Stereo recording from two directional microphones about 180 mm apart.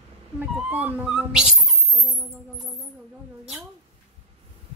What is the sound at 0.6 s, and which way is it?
Speech, 10° right (ahead or behind).